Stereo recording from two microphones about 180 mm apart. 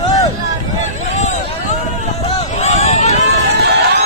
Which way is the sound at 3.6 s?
65° right (ahead or behind).